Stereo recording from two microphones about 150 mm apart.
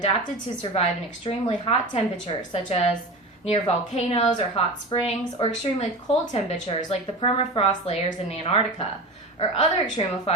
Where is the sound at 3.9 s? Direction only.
45° left (ahead or behind).